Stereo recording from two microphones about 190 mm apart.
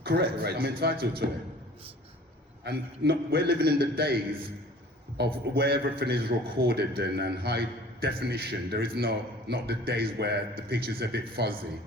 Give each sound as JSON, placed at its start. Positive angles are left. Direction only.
{"t": 0.0, "sound": "a man's voice", "side_deg": -55}
{"t": 2.6, "sound": "a man's voice", "side_deg": -55}